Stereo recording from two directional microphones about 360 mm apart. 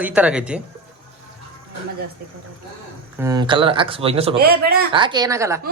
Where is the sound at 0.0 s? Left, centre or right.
Centre.